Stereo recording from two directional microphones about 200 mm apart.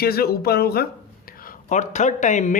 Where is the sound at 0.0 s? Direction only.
50° left (ahead or behind).